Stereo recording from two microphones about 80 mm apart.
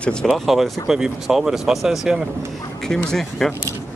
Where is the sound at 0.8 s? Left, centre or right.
Centre.